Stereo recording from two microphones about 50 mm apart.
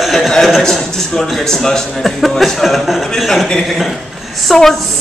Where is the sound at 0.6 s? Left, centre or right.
Centre.